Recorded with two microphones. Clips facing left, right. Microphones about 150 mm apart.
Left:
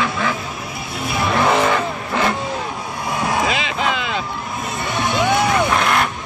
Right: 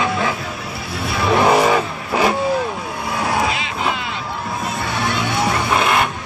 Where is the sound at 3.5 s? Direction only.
90° left.